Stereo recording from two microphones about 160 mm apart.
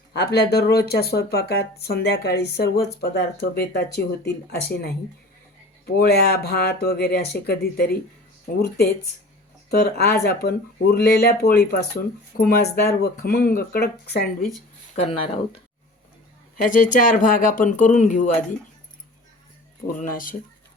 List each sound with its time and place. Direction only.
0.2 s speech: 80° left
9.6 s speech: 80° left
14.9 s speech: 45° left (ahead or behind)
16.6 s speech: 55° left (ahead or behind)
20.0 s speech: 60° left (ahead or behind)